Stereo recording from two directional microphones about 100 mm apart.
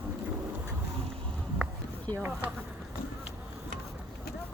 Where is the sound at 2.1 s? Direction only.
45° right (ahead or behind).